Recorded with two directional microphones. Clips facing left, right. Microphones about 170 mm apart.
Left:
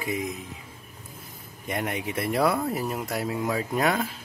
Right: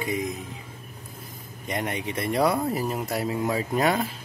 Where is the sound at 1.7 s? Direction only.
5° left (ahead or behind).